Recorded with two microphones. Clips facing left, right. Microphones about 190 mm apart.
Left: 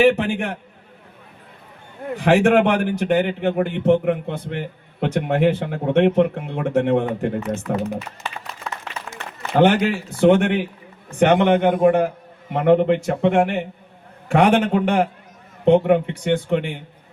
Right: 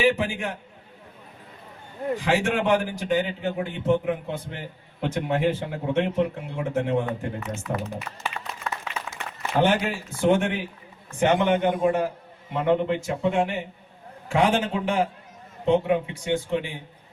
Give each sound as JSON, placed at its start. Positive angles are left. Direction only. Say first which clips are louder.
{"t": 0.0, "sound": "a man's voice", "louder": "left 6 dB", "side_deg": 60}
{"t": 2.1, "sound": "a man's voice", "louder": "left 10 dB", "side_deg": 60}
{"t": 7.7, "sound": "speech", "louder": "left 5 dB", "side_deg": 70}
{"t": 9.6, "sound": "a man's voice", "louder": "left 6 dB", "side_deg": 60}